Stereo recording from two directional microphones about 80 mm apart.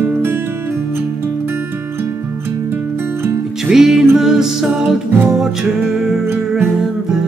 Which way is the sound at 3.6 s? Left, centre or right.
Centre.